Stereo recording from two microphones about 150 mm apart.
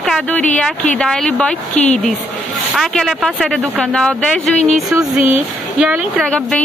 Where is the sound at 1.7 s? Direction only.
50° left (ahead or behind).